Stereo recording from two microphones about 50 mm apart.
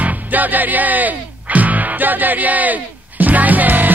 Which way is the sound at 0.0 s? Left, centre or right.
Right.